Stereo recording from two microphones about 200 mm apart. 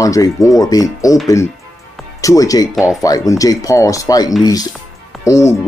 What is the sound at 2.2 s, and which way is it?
Speech, 15° left (ahead or behind).